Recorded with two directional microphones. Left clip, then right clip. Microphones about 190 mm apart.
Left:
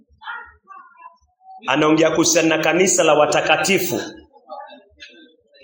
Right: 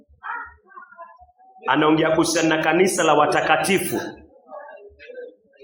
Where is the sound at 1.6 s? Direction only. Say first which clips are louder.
Left 2 dB; 25° left (ahead or behind).